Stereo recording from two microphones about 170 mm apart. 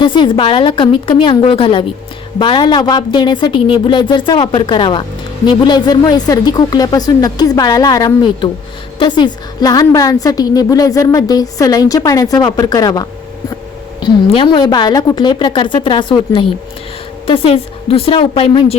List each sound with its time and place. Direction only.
0.0 s a woman's voice: 30° left (ahead or behind)